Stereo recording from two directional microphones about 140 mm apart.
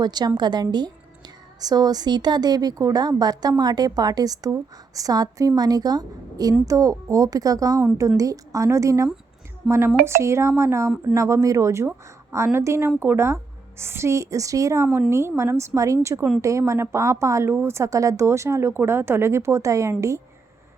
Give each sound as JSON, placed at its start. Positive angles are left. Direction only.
{"t": 0.0, "sound": "a woman's voice", "side_deg": -30}